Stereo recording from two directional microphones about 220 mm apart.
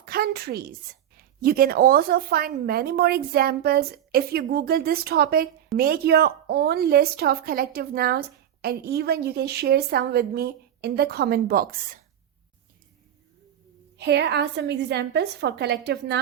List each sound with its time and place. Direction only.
0.0 s a woman's voice: 45° right (ahead or behind)
14.0 s a woman's voice: 50° right (ahead or behind)